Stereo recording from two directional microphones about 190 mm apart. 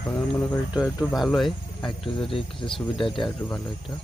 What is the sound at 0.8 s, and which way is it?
Speech, centre (ahead or behind).